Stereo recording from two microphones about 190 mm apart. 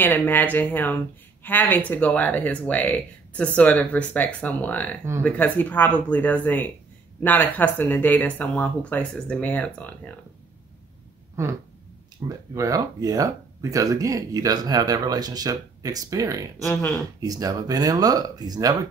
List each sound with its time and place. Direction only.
0.0 s speech: 10° left (ahead or behind)
12.3 s speech: 20° right (ahead or behind)